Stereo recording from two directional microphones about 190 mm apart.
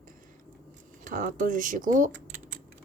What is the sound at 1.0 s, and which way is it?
Speech, 45° right (ahead or behind).